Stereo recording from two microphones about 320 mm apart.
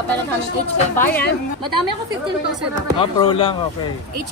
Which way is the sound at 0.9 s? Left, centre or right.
Centre.